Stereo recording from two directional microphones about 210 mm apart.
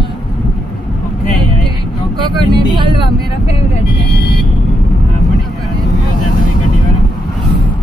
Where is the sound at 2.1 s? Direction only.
20° right (ahead or behind).